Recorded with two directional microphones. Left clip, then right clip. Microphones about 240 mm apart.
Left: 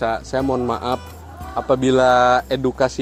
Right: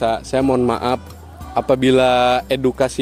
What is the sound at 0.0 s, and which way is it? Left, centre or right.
Speech, right.